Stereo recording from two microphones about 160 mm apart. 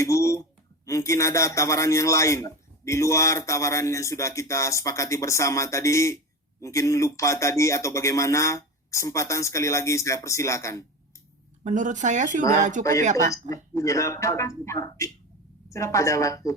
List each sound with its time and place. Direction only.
0.0 s a man's voice: 20° left (ahead or behind)
11.6 s speech: 50° right (ahead or behind)
13.5 s a man's voice: 20° left (ahead or behind)